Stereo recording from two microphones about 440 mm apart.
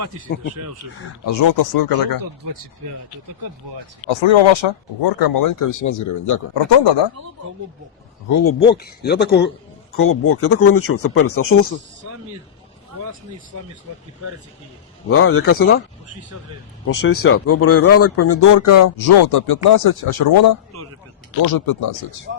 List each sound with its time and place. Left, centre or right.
0.5 s speech: right
1.2 s speech: left
1.5 s speech: left
4.0 s speech: left
5.2 s speech: left
6.5 s speech: left
8.3 s speech: left
8.7 s speech: left
12.9 s a sound: right
15.1 s speech: left
16.8 s speech: left